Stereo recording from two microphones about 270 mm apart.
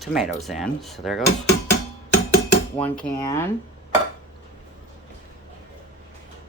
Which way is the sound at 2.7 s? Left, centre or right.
Centre.